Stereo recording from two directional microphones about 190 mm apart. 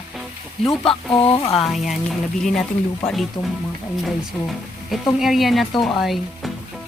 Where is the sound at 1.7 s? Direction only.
Centre (ahead or behind).